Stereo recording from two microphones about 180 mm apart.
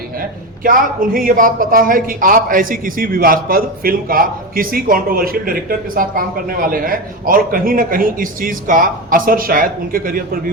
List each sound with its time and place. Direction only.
0.6 s a man's voice: 50° right (ahead or behind)